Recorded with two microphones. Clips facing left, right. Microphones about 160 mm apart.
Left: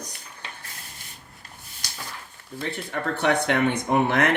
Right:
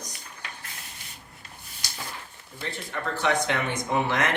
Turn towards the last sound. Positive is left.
turn(degrees=55)  # may be behind; listen again after turning